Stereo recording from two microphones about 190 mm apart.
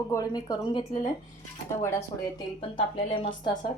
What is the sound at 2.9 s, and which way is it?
Speech, 30° left (ahead or behind).